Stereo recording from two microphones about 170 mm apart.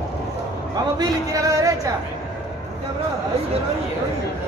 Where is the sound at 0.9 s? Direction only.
20° right (ahead or behind).